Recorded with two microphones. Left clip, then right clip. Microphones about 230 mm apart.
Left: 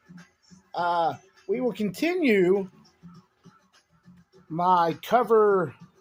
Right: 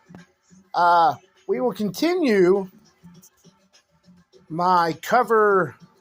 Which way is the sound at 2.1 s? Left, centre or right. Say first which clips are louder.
Right 3 dB; centre.